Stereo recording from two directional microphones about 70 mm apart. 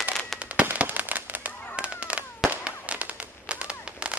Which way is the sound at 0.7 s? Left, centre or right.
Right.